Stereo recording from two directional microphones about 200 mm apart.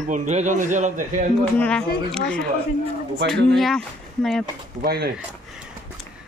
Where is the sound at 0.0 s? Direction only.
40° right (ahead or behind).